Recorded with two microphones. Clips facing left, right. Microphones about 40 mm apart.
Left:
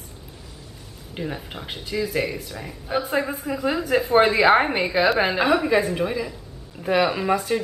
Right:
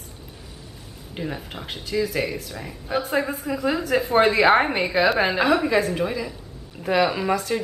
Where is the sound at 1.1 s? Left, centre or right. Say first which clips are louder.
Even; centre.